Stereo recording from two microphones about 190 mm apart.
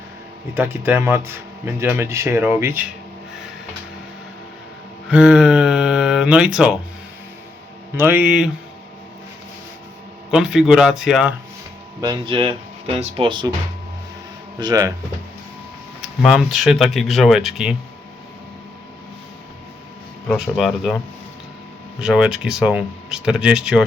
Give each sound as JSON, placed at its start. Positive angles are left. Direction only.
{"t": 0.5, "sound": "speech", "side_deg": -10}
{"t": 5.0, "sound": "a sound", "side_deg": -5}
{"t": 7.9, "sound": "speech", "side_deg": -10}
{"t": 10.3, "sound": "speech", "side_deg": -5}
{"t": 11.9, "sound": "speech", "side_deg": -20}
{"t": 14.6, "sound": "speech", "side_deg": -20}
{"t": 16.2, "sound": "speech", "side_deg": 0}
{"t": 20.2, "sound": "speech", "side_deg": 0}